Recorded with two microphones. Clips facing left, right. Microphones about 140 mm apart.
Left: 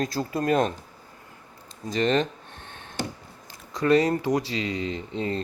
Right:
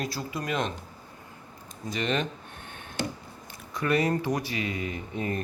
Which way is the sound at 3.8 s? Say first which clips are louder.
Left 5 dB; 35° left (ahead or behind).